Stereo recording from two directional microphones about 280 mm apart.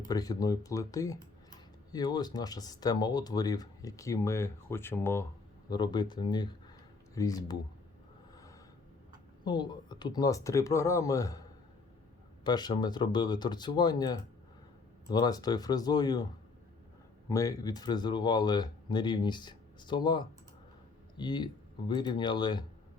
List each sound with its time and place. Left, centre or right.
0.1 s speech: centre
9.4 s speech: centre
12.5 s speech: centre
17.2 s speech: centre